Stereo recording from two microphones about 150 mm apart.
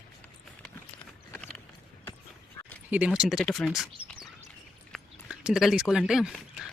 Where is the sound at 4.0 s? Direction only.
10° right (ahead or behind).